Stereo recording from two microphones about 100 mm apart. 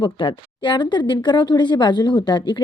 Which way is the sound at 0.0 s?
55° left (ahead or behind).